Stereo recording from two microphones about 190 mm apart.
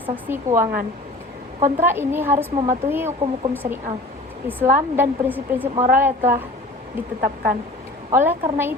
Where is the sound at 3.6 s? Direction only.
50° right (ahead or behind).